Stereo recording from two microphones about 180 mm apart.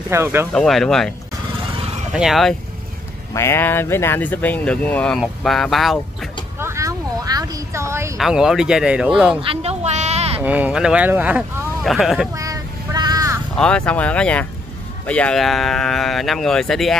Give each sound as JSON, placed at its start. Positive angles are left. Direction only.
{"t": 0.1, "sound": "speech", "side_deg": -15}
{"t": 0.5, "sound": "speech", "side_deg": 5}
{"t": 2.1, "sound": "speech", "side_deg": 0}
{"t": 3.3, "sound": "speech", "side_deg": 15}
{"t": 6.6, "sound": "a sound", "side_deg": -15}
{"t": 8.2, "sound": "speech", "side_deg": -5}
{"t": 9.4, "sound": "a sound", "side_deg": -35}
{"t": 10.4, "sound": "speech", "side_deg": -10}
{"t": 12.4, "sound": "child singing", "side_deg": -20}
{"t": 13.6, "sound": "speech", "side_deg": 5}